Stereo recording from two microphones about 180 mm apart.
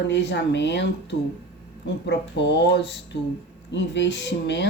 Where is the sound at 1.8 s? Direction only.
75° left (ahead or behind).